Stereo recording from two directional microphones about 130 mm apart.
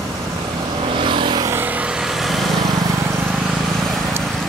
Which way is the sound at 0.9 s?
40° right (ahead or behind).